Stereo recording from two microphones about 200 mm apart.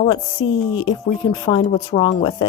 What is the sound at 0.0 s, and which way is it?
A woman's voice, 25° left (ahead or behind).